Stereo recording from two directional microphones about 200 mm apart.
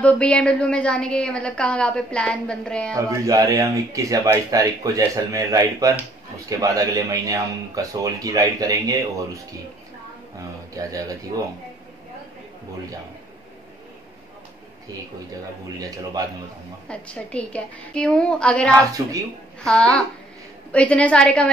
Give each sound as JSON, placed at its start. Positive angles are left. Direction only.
{"t": 0.0, "sound": "a woman's voice", "side_deg": 5}
{"t": 3.0, "sound": "speech", "side_deg": -15}
{"t": 10.7, "sound": "speech", "side_deg": -15}
{"t": 16.9, "sound": "a woman's voice", "side_deg": 5}
{"t": 18.7, "sound": "speech", "side_deg": -15}
{"t": 19.6, "sound": "a woman's voice", "side_deg": 5}